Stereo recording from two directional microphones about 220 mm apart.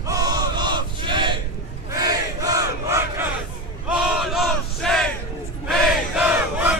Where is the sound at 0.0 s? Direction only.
15° right (ahead or behind).